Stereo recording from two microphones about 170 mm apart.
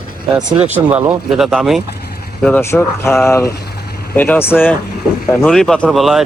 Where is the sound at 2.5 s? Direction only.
10° left (ahead or behind).